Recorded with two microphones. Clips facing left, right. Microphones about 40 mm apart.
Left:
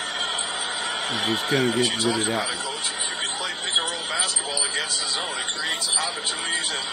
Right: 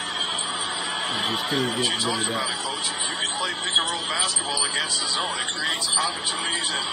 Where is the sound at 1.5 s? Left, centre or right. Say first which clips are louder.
Left 4 dB; left.